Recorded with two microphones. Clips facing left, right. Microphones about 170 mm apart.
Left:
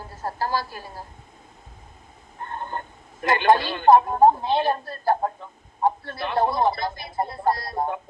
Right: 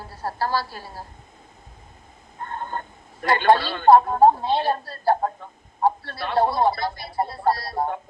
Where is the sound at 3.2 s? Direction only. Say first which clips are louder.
Right 1 dB; 20° left (ahead or behind).